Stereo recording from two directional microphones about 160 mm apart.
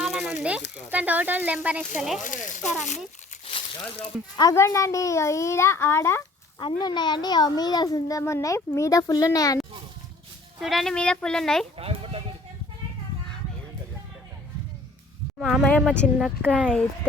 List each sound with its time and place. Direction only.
0.0 s a sound: centre (ahead or behind)
0.9 s a child's voice: 10° right (ahead or behind)
2.2 s a sound: 50° left (ahead or behind)
3.4 s crumpling: 40° left (ahead or behind)
4.4 s a child's voice: 20° left (ahead or behind)
6.6 s a child's voice: 25° left (ahead or behind)
10.6 s a child's voice: centre (ahead or behind)
11.8 s speech: 35° right (ahead or behind)
15.4 s a child's voice: centre (ahead or behind)